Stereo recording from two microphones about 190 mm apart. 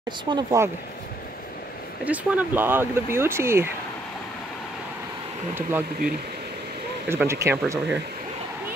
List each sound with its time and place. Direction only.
0.2 s speech: 25° right (ahead or behind)
2.0 s speech: 10° right (ahead or behind)
5.5 s speech: 10° right (ahead or behind)
7.1 s speech: 15° right (ahead or behind)